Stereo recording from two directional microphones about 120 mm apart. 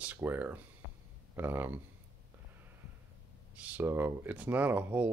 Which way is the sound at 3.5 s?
10° right (ahead or behind).